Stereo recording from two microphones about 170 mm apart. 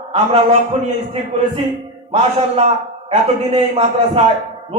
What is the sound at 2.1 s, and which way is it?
A man's voice, 40° right (ahead or behind).